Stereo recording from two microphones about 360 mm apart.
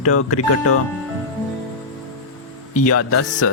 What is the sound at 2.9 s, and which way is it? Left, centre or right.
Speech, left.